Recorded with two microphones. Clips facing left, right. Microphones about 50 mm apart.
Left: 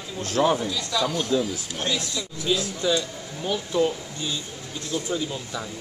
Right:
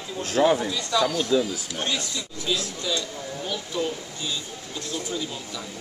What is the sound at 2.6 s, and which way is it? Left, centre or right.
Speech, centre.